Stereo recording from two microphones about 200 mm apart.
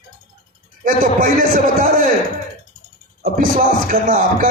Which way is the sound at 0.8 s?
45° right (ahead or behind).